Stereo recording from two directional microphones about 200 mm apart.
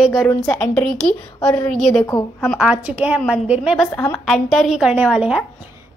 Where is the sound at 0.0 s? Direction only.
5° right (ahead or behind).